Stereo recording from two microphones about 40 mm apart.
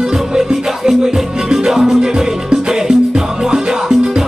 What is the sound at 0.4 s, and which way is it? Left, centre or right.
Music, centre.